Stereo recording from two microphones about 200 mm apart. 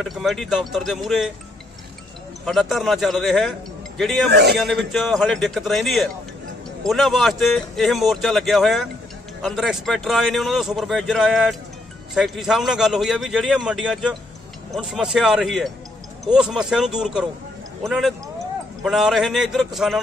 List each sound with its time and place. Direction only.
0.0 s speech: centre (ahead or behind)
2.4 s speech: centre (ahead or behind)
4.3 s a man's voice: 55° right (ahead or behind)
4.6 s speech: centre (ahead or behind)